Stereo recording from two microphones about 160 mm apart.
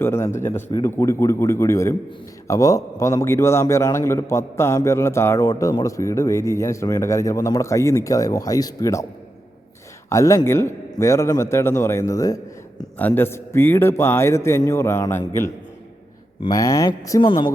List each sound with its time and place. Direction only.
0.0 s a man's voice: 15° left (ahead or behind)
10.1 s a man's voice: 20° left (ahead or behind)
17.2 s speech: 35° left (ahead or behind)